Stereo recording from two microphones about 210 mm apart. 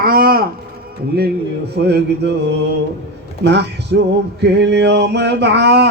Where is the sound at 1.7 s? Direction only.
50° right (ahead or behind).